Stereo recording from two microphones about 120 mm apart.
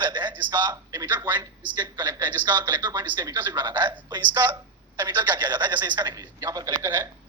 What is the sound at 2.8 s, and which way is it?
Speech, 35° right (ahead or behind).